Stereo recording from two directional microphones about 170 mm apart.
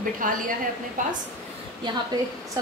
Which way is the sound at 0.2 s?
50° right (ahead or behind).